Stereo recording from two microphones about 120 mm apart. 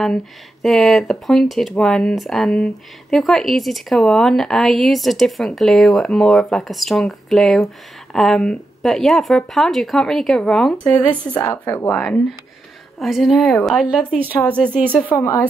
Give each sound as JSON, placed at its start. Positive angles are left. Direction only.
{"t": 0.0, "sound": "a woman's voice", "side_deg": 0}
{"t": 11.9, "sound": "a woman's voice", "side_deg": 10}
{"t": 13.0, "sound": "speech", "side_deg": 0}
{"t": 14.3, "sound": "a woman's voice", "side_deg": 10}
{"t": 15.1, "sound": "speech", "side_deg": 25}